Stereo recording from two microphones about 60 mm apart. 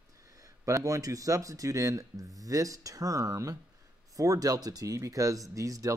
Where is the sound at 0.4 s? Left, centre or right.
Right.